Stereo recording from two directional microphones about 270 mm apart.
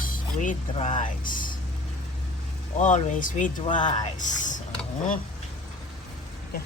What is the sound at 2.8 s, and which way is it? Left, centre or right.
Speech, left.